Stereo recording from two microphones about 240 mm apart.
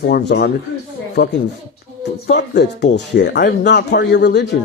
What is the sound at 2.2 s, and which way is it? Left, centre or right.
Speech, left.